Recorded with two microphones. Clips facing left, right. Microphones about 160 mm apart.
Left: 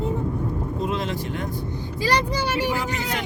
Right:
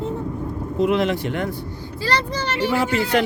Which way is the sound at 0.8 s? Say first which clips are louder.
Right 10 dB; 70° right (ahead or behind).